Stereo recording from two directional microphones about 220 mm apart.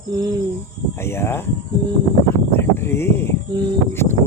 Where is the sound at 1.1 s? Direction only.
10° left (ahead or behind).